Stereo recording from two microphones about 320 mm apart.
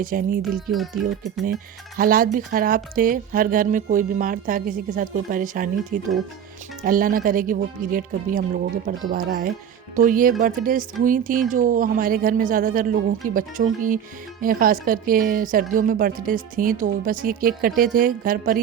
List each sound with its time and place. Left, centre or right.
0.0 s speech: right
0.4 s speech: centre
1.0 s speech: right